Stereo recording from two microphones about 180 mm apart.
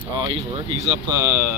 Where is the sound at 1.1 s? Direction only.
15° right (ahead or behind).